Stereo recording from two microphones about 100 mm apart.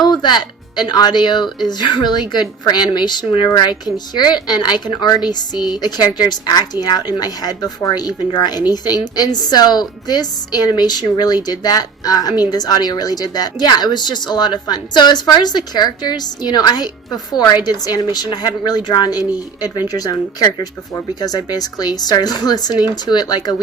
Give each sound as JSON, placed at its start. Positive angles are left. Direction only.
{"t": 0.0, "sound": "a woman's voice", "side_deg": 45}